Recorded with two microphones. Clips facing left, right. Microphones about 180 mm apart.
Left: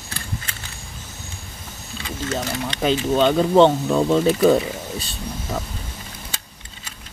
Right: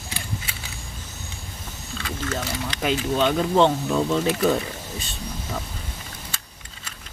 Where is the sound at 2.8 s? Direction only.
30° left (ahead or behind).